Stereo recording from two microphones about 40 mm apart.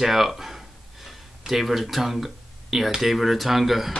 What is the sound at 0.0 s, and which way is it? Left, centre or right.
Speech, centre.